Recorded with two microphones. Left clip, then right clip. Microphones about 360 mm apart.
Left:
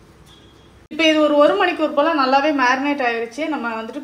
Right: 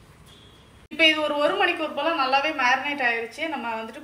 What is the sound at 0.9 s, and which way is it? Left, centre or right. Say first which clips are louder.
A woman's voice: left 6 dB; left.